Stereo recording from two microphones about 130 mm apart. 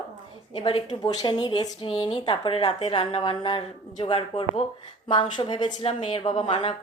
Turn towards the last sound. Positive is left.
turn(degrees=40)  # may be behind; listen again after turning